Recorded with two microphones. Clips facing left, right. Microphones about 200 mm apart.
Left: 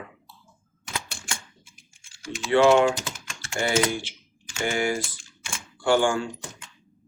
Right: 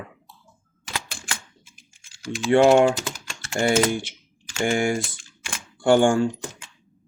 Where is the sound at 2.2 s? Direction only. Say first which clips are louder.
Right 2 dB; 45° right (ahead or behind).